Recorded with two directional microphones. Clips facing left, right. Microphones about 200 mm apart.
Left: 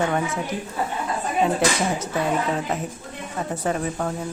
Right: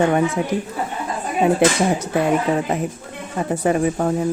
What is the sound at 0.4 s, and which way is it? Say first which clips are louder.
Speech: right 6 dB; 10° right (ahead or behind).